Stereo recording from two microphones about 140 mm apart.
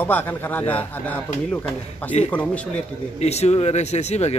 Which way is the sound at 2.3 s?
10° left (ahead or behind).